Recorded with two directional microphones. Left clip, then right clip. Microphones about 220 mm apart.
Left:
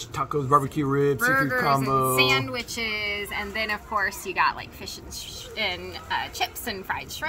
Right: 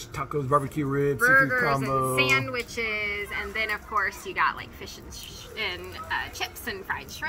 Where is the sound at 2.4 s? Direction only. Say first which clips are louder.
Even; 40° left (ahead or behind).